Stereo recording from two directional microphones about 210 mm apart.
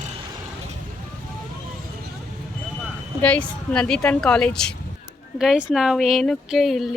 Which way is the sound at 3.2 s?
5° left (ahead or behind).